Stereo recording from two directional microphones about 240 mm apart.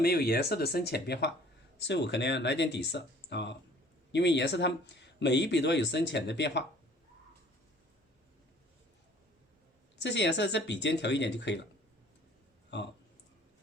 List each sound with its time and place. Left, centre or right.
0.0 s speech: left
10.0 s speech: left